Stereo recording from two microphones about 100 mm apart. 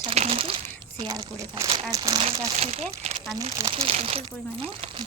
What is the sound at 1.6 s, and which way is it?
Speech, 30° right (ahead or behind).